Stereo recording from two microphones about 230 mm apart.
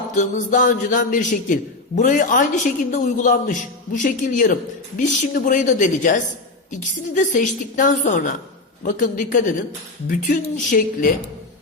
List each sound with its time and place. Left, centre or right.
0.1 s a woman's voice: left